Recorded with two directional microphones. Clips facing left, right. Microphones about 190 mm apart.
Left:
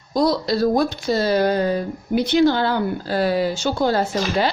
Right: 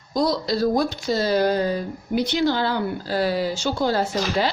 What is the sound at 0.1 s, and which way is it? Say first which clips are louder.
Speech: left 3 dB; 60° left (ahead or behind).